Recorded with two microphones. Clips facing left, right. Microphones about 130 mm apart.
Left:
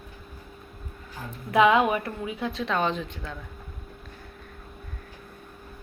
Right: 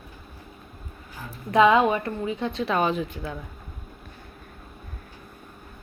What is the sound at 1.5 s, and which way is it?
Speech, 5° left (ahead or behind).